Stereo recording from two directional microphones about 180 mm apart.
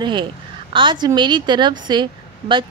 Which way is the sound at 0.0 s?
25° right (ahead or behind).